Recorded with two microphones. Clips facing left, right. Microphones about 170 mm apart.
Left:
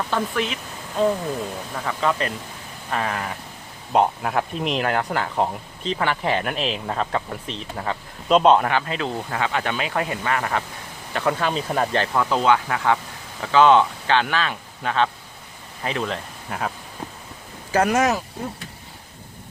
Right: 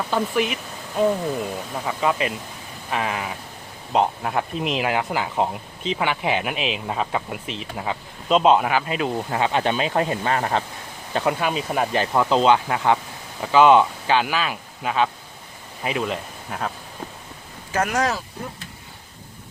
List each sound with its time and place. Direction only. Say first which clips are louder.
0.1 s speech: right 2 dB; 10° right (ahead or behind)
9.3 s speech: right 4 dB; 25° right (ahead or behind); by 16.7 s centre (ahead or behind)
17.9 s speech: left 1 dB; 20° left (ahead or behind)